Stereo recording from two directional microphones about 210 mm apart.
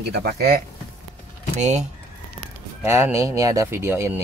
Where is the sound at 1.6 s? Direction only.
35° right (ahead or behind).